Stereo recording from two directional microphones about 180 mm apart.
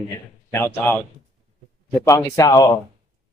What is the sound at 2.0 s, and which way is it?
Speech, 20° left (ahead or behind).